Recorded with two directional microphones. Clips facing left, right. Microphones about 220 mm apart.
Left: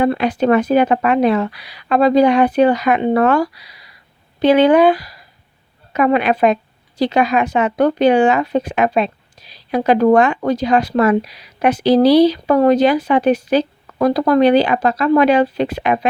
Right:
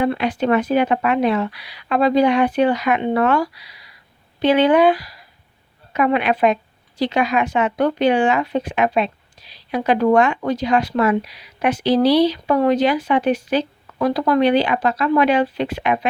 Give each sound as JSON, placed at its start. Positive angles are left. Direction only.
{"t": 0.0, "sound": "speech", "side_deg": 40}